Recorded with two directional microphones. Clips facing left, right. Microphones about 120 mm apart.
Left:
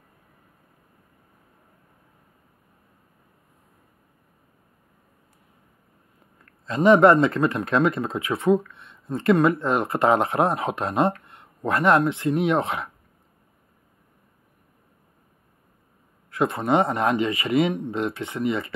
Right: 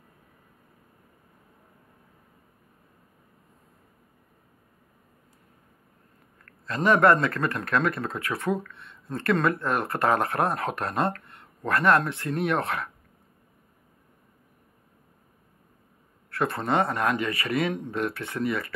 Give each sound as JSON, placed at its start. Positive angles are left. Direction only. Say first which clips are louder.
{"t": 6.4, "sound": "speech", "louder": "left 6 dB", "side_deg": 20}
{"t": 16.3, "sound": "speech", "louder": "left 4 dB", "side_deg": 15}